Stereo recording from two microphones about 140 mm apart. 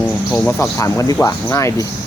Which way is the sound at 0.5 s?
20° left (ahead or behind).